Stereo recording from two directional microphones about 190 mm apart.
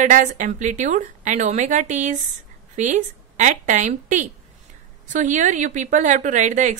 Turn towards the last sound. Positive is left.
turn(degrees=-40)  # may be behind; listen again after turning